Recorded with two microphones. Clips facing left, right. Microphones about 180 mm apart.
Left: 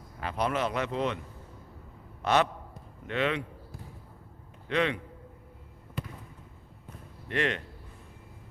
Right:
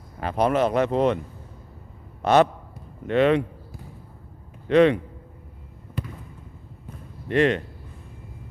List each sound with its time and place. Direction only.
0.2 s speech: 45° right (ahead or behind)
2.2 s speech: 45° right (ahead or behind)
4.7 s speech: 45° right (ahead or behind)
6.0 s basketball bounce: centre (ahead or behind)
7.3 s speech: 35° right (ahead or behind)